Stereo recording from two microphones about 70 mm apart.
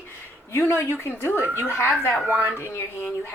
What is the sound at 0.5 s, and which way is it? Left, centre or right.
A woman's voice, left.